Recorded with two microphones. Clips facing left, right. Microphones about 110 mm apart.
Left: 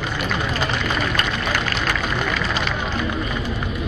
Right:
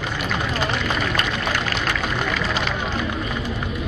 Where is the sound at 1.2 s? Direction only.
50° left (ahead or behind).